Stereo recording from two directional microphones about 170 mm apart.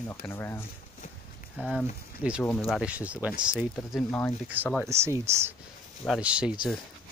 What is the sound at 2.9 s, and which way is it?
Speech, 10° right (ahead or behind).